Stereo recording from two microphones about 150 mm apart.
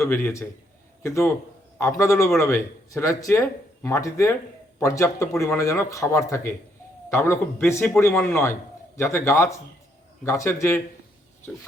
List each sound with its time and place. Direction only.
0.0 s a man's voice: 15° left (ahead or behind)